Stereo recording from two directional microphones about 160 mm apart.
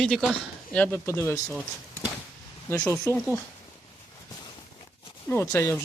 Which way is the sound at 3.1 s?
15° left (ahead or behind).